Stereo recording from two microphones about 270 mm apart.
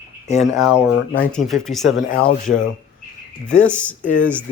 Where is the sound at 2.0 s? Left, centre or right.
Left.